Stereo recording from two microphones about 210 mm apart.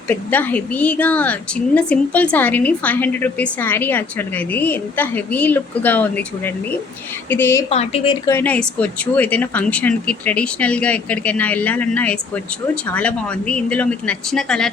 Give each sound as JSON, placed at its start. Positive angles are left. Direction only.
{"t": 0.1, "sound": "a woman's voice", "side_deg": 10}
{"t": 7.7, "sound": "speech", "side_deg": 30}
{"t": 8.3, "sound": "a woman's voice", "side_deg": 10}